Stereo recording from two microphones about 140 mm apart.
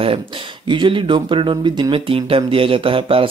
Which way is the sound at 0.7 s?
35° right (ahead or behind).